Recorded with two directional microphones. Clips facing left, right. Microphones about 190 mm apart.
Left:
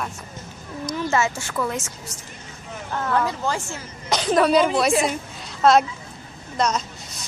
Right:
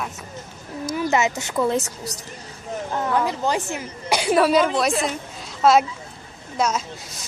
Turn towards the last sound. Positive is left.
turn(degrees=-5)  # may be behind; listen again after turning